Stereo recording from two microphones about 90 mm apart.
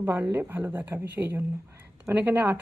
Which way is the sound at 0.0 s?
25° right (ahead or behind).